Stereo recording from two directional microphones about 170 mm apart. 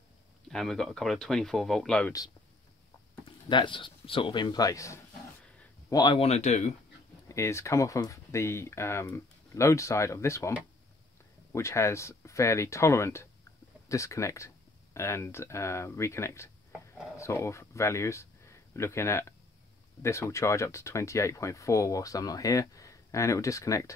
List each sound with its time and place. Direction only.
0.5 s speech: 5° left (ahead or behind)
3.4 s speech: 30° left (ahead or behind)
7.2 s speech: 15° left (ahead or behind)
11.5 s speech: 15° left (ahead or behind)